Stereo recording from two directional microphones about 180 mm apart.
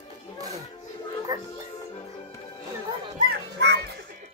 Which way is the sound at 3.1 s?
65° right (ahead or behind).